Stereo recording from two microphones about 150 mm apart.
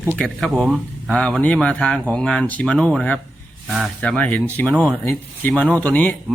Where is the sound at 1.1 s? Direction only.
5° left (ahead or behind).